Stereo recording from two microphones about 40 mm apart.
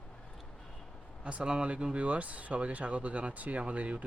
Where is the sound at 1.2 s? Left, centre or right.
Right.